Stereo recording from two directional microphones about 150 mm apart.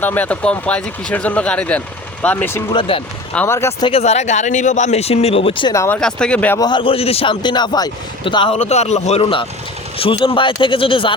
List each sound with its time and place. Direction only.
0.0 s speech: 10° left (ahead or behind)
2.7 s a man's voice: 35° left (ahead or behind)
3.3 s speech: 15° left (ahead or behind)
3.8 s speech: 45° left (ahead or behind)
5.7 s speech: 20° left (ahead or behind)
6.0 s speech: 5° left (ahead or behind)
6.6 s a man's voice: 30° left (ahead or behind)
8.5 s a man's voice: 45° left (ahead or behind)